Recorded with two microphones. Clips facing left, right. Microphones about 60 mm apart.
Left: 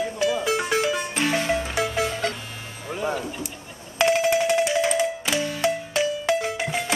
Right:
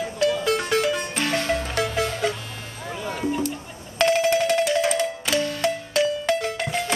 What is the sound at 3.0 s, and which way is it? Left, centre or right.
Speech, left.